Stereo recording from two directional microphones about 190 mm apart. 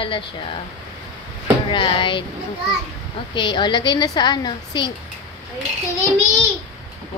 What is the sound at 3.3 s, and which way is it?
A woman's voice, 25° left (ahead or behind).